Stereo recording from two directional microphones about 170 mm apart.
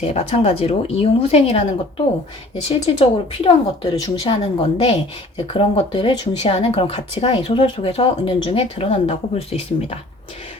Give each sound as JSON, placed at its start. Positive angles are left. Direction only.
{"t": 0.0, "sound": "speech", "side_deg": 35}
{"t": 2.6, "sound": "speech", "side_deg": 30}